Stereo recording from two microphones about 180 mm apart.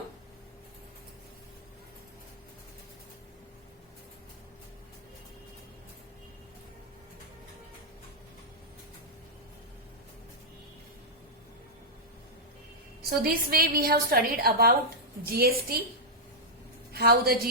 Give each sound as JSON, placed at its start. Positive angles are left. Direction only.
{"t": 13.0, "sound": "a woman's voice", "side_deg": -55}
{"t": 16.9, "sound": "a woman's voice", "side_deg": -60}